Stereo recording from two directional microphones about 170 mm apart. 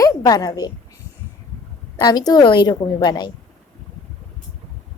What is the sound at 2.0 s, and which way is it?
A woman's voice, 25° left (ahead or behind).